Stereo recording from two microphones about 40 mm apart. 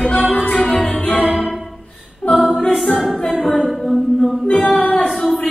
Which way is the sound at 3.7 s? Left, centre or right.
Centre.